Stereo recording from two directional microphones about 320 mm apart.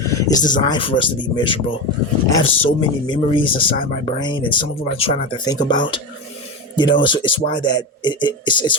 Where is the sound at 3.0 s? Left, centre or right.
Centre.